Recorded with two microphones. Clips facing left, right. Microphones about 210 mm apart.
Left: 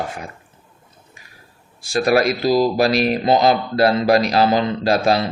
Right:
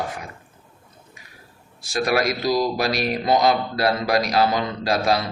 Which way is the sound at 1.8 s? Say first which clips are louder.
Left 5 dB; 30° left (ahead or behind).